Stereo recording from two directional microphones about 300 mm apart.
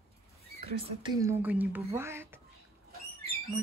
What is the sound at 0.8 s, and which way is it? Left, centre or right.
Speech, centre.